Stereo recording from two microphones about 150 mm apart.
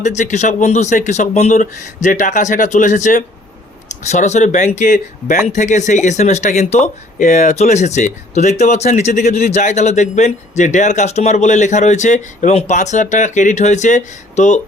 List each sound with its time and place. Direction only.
0.0 s speech: 55° left (ahead or behind)